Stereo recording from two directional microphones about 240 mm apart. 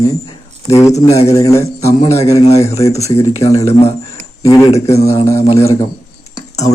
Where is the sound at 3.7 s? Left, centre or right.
Left.